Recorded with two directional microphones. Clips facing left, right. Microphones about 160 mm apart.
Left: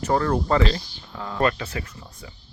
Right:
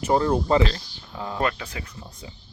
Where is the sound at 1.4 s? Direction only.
5° right (ahead or behind).